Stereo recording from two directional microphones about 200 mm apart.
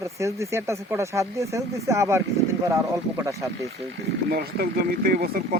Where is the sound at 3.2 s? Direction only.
15° right (ahead or behind).